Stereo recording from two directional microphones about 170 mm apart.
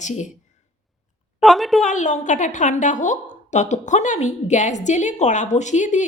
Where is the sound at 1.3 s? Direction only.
Centre (ahead or behind).